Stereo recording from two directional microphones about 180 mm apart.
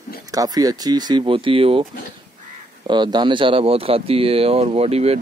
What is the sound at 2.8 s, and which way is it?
Speech, 25° right (ahead or behind).